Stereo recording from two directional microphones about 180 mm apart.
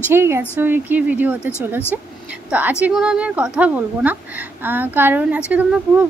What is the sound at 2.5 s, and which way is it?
A woman's voice, 10° right (ahead or behind).